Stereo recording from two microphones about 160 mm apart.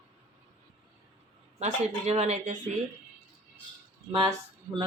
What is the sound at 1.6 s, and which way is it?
Speech, 45° right (ahead or behind).